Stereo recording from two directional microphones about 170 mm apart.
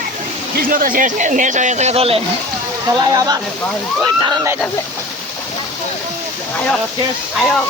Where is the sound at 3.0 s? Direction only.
20° right (ahead or behind).